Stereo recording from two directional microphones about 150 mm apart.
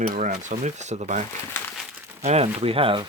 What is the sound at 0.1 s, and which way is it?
Speech, 55° right (ahead or behind).